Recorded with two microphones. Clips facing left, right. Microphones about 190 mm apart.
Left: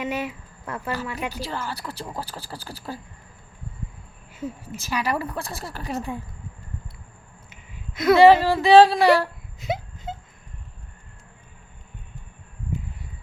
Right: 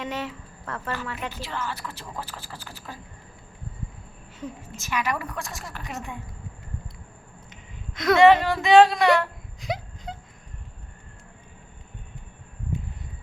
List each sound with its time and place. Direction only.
0.0 s speech: 10° left (ahead or behind)
1.3 s speech: 35° left (ahead or behind)
4.4 s a woman's voice: 10° left (ahead or behind)
4.8 s speech: 35° left (ahead or behind)
7.5 s a sound: 5° left (ahead or behind)
8.1 s speech: 30° left (ahead or behind)
9.6 s wail: centre (ahead or behind)